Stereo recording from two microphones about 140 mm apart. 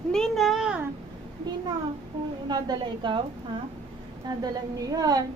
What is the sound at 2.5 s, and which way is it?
Speech, 30° right (ahead or behind).